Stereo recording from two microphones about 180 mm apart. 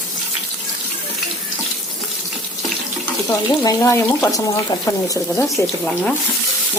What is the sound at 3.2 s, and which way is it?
Speech, 20° left (ahead or behind).